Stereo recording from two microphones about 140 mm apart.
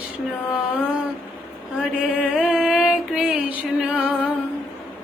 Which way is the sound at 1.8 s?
5° right (ahead or behind).